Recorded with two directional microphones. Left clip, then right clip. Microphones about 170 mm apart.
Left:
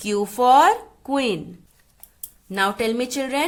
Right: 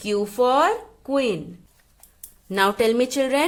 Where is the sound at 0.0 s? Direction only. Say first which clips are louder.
Left 1 dB; 5° left (ahead or behind).